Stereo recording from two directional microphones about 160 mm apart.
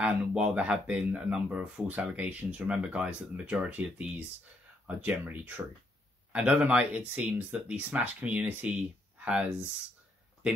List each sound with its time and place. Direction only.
0.0 s speech: 5° right (ahead or behind)